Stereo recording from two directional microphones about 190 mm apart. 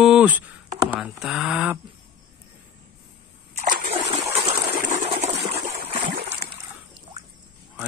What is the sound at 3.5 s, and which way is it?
Splash, 40° right (ahead or behind).